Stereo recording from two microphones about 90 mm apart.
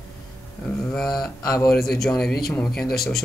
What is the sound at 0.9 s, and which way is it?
Speech, 5° left (ahead or behind).